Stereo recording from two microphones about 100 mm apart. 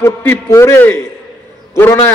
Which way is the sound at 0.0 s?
25° left (ahead or behind).